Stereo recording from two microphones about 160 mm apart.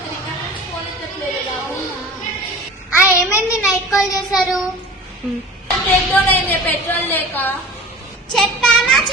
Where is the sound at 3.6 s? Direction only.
5° right (ahead or behind).